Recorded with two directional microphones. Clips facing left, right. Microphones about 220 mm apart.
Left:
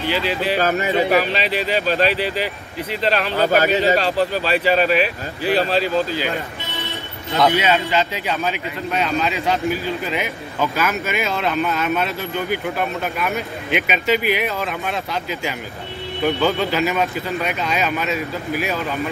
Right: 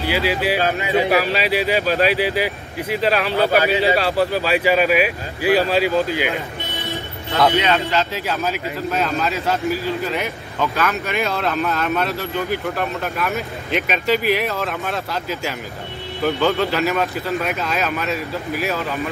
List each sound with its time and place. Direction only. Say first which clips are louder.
0.0 s speech: right 1 dB; 10° right (ahead or behind)
0.6 s a man's voice: left 2 dB; 45° left (ahead or behind)
0.9 s speech: right 3 dB; 10° right (ahead or behind)
3.3 s a man's voice: left 2 dB; 45° left (ahead or behind)
3.8 s speech: even; 10° right (ahead or behind)
7.3 s a man's voice: even; 5° left (ahead or behind)